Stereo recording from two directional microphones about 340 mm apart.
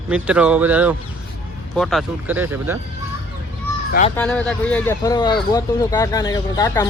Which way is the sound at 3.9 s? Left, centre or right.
Left.